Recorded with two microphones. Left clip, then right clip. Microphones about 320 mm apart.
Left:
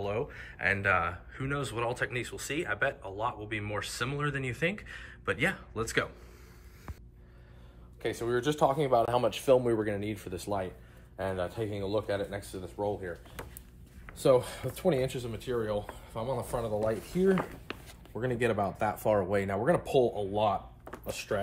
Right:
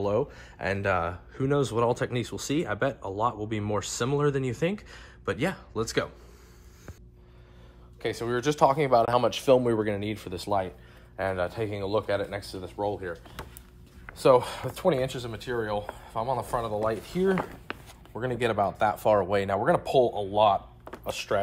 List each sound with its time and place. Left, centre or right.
0.0 s speech: centre
8.0 s speech: right
14.7 s speech: centre